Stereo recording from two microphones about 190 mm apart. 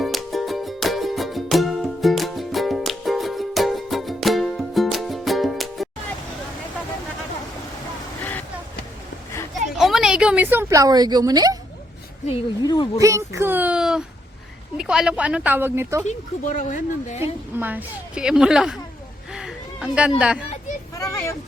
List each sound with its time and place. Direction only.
0.0 s music: centre (ahead or behind)
8.2 s vehicle: 10° left (ahead or behind)
9.6 s a sound: centre (ahead or behind); by 11.5 s 20° right (ahead or behind)
12.3 s speech: 20° left (ahead or behind)
13.0 s speech: 15° right (ahead or behind)
16.0 s speech: 40° left (ahead or behind)
17.6 s a woman's voice: 10° right (ahead or behind)
19.3 s a sound: 5° right (ahead or behind)
20.9 s vehicle: 15° left (ahead or behind)